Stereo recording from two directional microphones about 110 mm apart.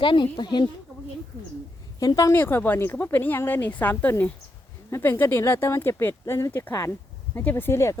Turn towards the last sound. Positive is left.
turn(degrees=25)  # may be behind; listen again after turning